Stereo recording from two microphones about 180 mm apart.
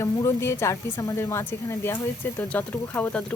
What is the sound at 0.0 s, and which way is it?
A woman's voice, 15° left (ahead or behind).